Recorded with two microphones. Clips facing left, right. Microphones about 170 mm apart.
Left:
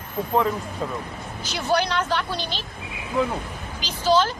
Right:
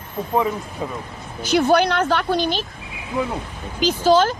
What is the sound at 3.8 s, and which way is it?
Speech, 50° right (ahead or behind).